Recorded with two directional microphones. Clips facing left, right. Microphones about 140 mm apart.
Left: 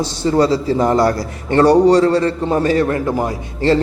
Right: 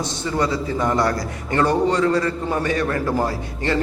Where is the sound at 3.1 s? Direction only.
15° left (ahead or behind).